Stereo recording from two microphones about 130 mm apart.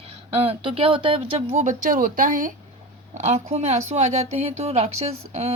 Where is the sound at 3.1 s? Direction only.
60° right (ahead or behind).